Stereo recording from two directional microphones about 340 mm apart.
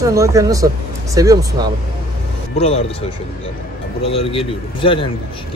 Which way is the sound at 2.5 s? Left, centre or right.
Centre.